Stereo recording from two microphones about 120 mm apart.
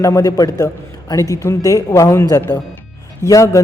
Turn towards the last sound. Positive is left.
turn(degrees=25)  # may be behind; listen again after turning